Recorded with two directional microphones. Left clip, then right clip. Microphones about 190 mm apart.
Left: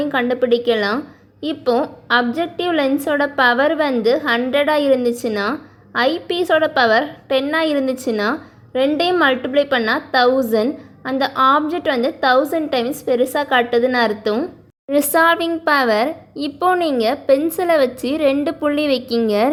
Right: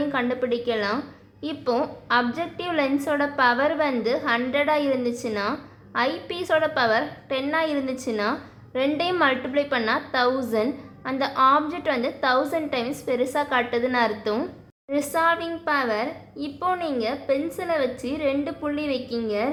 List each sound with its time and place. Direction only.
0.0 s a woman's voice: 30° left (ahead or behind)
14.8 s a woman's voice: 45° left (ahead or behind)